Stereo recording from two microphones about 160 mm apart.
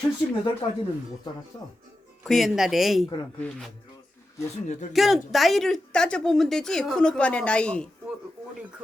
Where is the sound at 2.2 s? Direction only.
Centre (ahead or behind).